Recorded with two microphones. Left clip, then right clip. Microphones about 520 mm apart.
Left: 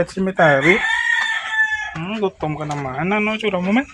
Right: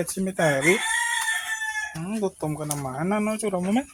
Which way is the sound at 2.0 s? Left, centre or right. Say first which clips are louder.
Left 6 dB; right.